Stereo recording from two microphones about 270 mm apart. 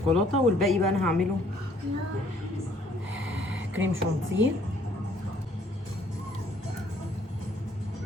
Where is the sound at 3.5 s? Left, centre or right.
Right.